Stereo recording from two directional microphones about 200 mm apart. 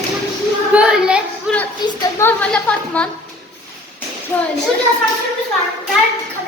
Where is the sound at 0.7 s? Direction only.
5° right (ahead or behind).